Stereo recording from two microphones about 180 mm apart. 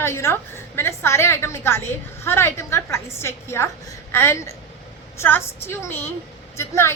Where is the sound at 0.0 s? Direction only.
15° left (ahead or behind).